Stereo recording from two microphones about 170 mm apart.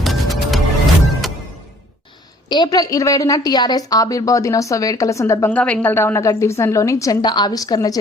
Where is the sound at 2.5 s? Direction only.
25° left (ahead or behind).